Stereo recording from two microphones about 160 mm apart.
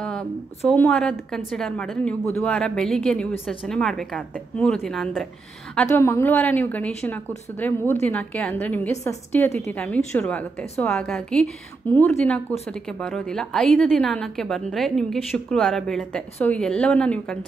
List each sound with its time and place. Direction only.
0.7 s a woman's voice: 5° left (ahead or behind)
5.8 s a woman's voice: 15° left (ahead or behind)